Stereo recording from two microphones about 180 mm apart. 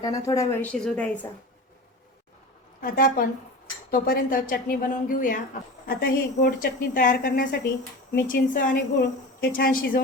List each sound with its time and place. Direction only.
0.0 s speech: 20° left (ahead or behind)
0.7 s a woman's voice: 5° left (ahead or behind)
2.8 s a woman's voice: 55° left (ahead or behind)